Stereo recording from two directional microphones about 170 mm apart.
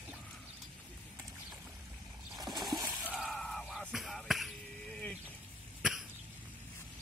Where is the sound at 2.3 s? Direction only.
25° right (ahead or behind).